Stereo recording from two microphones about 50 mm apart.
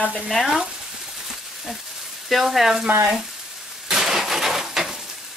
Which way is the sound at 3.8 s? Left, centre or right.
Centre.